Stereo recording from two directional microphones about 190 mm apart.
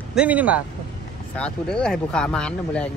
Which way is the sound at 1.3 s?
5° left (ahead or behind).